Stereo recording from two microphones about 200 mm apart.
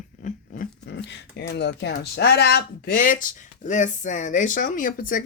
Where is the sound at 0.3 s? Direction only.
40° left (ahead or behind).